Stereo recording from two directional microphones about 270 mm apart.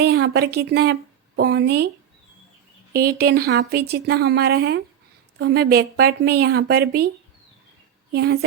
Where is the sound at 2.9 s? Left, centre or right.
Right.